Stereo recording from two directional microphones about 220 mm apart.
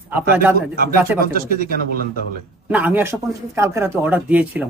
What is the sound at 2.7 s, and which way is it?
Speech, 5° right (ahead or behind).